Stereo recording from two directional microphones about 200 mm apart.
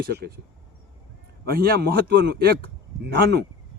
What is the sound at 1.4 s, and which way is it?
A man's voice, 50° right (ahead or behind).